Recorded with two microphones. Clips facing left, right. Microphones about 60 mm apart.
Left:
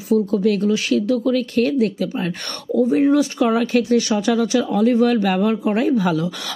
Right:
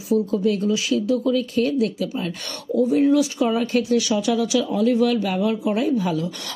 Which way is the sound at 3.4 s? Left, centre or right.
Left.